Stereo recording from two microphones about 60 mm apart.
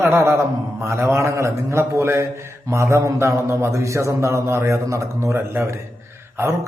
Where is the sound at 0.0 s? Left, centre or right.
Right.